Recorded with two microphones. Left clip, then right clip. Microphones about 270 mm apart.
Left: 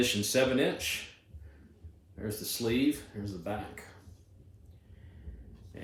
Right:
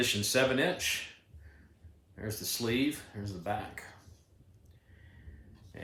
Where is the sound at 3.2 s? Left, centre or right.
Centre.